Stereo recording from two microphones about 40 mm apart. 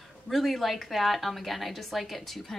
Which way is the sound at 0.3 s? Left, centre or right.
Centre.